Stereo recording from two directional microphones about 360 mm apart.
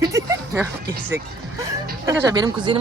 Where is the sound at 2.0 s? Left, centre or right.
Centre.